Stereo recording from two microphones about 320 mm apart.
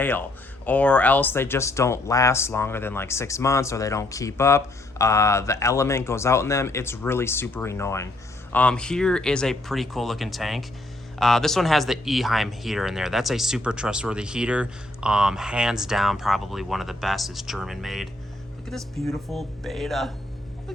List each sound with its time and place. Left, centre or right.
0.0 s speech: centre